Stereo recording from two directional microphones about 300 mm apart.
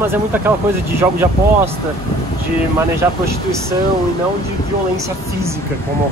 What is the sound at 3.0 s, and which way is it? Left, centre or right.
Speech, centre.